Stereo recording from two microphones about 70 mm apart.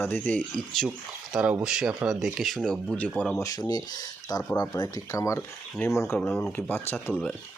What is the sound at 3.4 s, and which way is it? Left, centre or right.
Speech, left.